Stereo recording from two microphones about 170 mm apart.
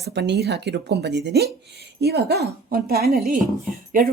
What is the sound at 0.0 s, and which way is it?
Speech, 80° right.